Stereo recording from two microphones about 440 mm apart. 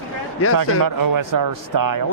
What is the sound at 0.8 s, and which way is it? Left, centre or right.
Speech, right.